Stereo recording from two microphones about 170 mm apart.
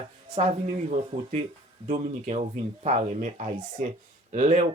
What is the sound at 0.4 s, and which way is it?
Speech, 35° right (ahead or behind).